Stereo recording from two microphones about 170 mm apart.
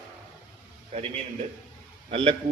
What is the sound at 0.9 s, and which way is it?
A man's voice, 40° right (ahead or behind).